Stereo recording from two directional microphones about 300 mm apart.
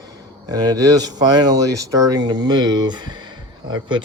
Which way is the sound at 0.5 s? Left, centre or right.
Centre.